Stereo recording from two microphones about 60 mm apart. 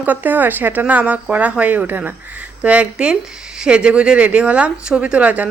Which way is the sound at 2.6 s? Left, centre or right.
Right.